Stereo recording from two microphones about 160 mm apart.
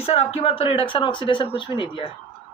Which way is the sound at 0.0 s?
40° left (ahead or behind).